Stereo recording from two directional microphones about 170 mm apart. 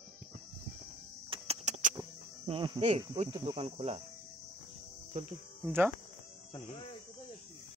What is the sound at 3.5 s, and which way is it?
Cricket, 40° right (ahead or behind).